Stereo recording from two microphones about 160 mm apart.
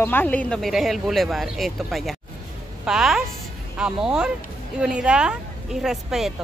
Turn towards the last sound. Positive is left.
turn(degrees=0)  # may be behind; listen again after turning